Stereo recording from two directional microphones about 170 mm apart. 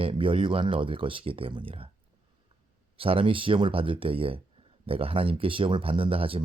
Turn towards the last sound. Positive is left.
turn(degrees=-35)  # may be behind; listen again after turning